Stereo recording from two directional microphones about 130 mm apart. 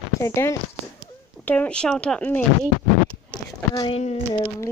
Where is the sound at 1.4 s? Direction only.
10° left (ahead or behind).